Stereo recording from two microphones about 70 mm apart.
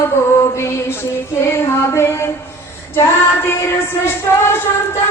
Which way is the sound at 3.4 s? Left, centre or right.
Left.